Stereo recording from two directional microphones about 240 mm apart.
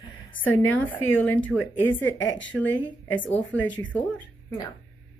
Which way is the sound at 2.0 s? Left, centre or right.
Left.